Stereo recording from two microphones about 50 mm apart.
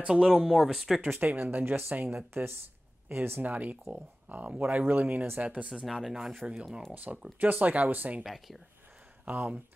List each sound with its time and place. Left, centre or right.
0.1 s speech: centre
1.2 s speech: right
3.4 s speech: right
5.4 s speech: right
6.0 s speech: centre
7.3 s speech: right
8.2 s speech: centre
9.2 s speech: right